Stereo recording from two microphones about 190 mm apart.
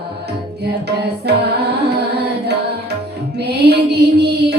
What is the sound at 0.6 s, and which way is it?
Music, 60° right (ahead or behind).